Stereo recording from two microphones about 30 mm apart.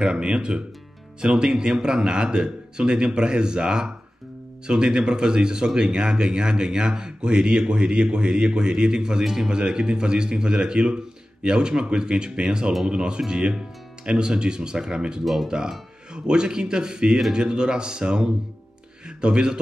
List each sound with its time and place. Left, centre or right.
0.0 s speech: right
9.2 s speech: centre
9.5 s speech: right